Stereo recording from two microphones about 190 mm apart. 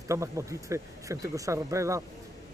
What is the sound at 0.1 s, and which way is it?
Speech, 15° right (ahead or behind).